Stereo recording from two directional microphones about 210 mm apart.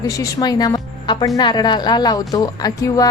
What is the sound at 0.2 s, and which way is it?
A woman's voice, 20° left (ahead or behind).